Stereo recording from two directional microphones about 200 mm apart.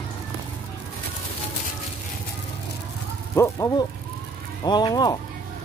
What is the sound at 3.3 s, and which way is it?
Speech, 15° left (ahead or behind).